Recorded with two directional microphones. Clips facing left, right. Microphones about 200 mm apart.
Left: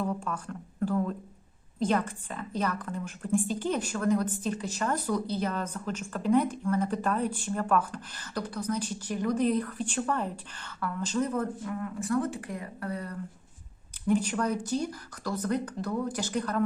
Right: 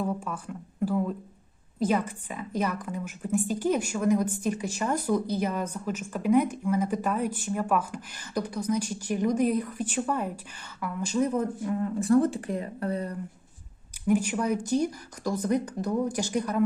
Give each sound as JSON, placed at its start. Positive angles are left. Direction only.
{"t": 0.0, "sound": "a woman's voice", "side_deg": -10}
{"t": 11.8, "sound": "speech", "side_deg": -30}
{"t": 14.1, "sound": "a woman's voice", "side_deg": -10}